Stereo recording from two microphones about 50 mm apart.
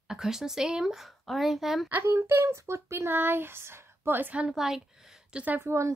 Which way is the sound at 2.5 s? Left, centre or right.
Right.